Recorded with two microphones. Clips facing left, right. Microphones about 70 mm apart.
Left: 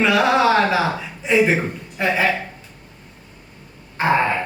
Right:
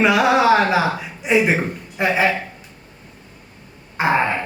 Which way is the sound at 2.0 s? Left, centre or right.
Centre.